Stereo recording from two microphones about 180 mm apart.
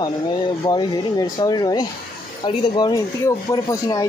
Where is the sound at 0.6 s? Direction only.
25° left (ahead or behind).